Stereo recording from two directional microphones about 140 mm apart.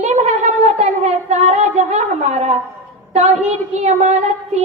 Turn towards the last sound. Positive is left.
turn(degrees=-50)  # may be behind; listen again after turning